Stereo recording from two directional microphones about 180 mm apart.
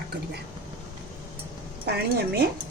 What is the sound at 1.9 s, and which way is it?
Speech, 65° right (ahead or behind).